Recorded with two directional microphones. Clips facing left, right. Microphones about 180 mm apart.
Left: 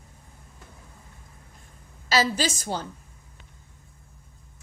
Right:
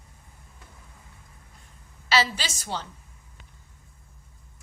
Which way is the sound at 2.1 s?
45° left (ahead or behind).